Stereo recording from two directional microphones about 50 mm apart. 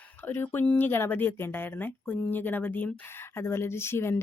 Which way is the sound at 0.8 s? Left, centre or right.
Left.